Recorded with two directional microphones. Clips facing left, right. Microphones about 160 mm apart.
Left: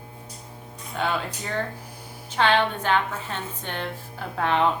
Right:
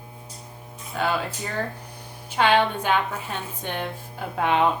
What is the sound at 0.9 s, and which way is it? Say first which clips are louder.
A woman's voice: right 1 dB; 5° right (ahead or behind).